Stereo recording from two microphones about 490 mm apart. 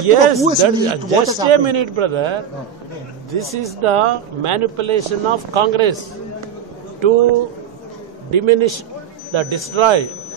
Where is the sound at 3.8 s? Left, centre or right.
Right.